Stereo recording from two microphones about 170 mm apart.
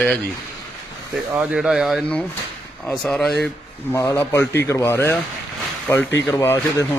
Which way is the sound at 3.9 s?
15° left (ahead or behind).